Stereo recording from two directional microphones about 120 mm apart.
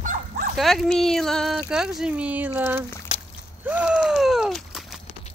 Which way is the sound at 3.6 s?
10° right (ahead or behind).